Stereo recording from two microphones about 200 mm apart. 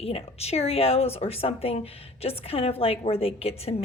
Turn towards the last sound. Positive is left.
turn(degrees=30)  # may be behind; listen again after turning